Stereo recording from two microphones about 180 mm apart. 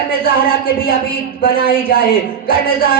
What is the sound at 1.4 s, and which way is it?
Speech, 55° left (ahead or behind).